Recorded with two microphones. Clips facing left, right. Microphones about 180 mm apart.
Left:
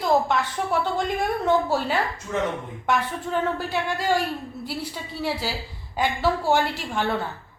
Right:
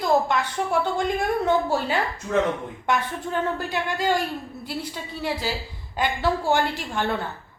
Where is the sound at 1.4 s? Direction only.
Centre (ahead or behind).